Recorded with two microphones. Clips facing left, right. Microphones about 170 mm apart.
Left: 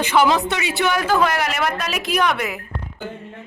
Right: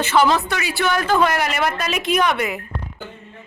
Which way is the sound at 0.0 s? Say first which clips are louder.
Even; 15° left (ahead or behind).